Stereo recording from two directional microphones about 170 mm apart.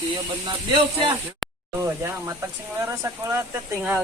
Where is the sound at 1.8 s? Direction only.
15° right (ahead or behind).